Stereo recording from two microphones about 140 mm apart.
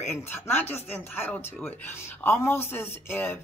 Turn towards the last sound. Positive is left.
turn(degrees=15)  # may be behind; listen again after turning